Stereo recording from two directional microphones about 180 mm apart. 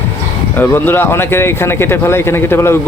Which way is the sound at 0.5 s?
10° left (ahead or behind).